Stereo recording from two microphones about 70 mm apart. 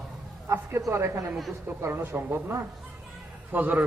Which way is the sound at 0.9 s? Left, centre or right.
Right.